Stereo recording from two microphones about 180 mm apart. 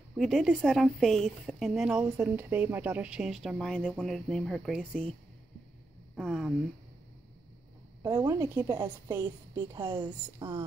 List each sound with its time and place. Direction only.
0.2 s speech: centre (ahead or behind)
6.1 s speech: centre (ahead or behind)
8.0 s a woman's voice: 20° right (ahead or behind)
9.8 s a woman's voice: 25° right (ahead or behind)